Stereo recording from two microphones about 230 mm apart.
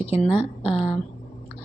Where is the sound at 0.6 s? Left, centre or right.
Left.